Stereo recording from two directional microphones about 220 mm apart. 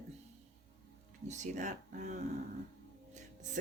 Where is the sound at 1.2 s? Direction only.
35° right (ahead or behind).